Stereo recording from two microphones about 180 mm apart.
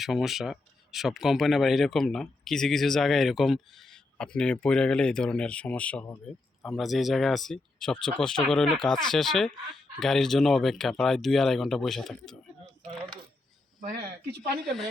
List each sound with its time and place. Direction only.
0.0 s speech: centre (ahead or behind)
13.8 s speech: 60° right (ahead or behind)